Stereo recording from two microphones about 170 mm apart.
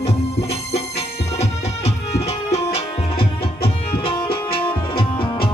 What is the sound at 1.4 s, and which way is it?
Music, 40° left (ahead or behind).